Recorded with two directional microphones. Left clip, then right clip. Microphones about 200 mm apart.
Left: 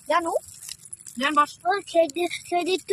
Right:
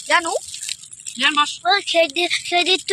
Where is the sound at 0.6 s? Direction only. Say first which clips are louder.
Right 11 dB; 50° left (ahead or behind).